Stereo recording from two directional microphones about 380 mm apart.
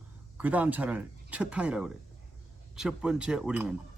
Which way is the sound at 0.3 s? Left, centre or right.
Centre.